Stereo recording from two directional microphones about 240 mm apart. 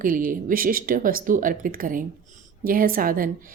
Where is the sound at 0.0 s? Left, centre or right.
Right.